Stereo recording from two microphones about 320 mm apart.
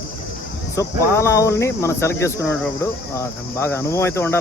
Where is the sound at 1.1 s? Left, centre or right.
Centre.